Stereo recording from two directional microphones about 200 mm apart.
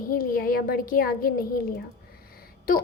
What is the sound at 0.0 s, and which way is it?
A woman's voice, 45° left (ahead or behind).